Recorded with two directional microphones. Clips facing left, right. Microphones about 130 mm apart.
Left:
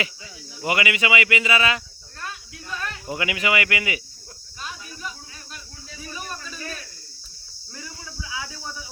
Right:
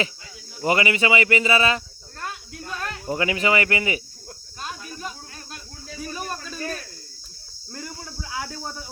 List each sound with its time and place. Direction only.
0.6 s speech: 35° right (ahead or behind)
2.6 s speech: 45° right (ahead or behind)
4.6 s snake: 40° right (ahead or behind)
7.7 s a sound: 50° right (ahead or behind)